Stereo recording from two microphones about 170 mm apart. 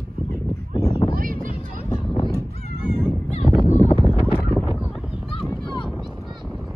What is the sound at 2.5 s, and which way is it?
Honk, 40° left (ahead or behind).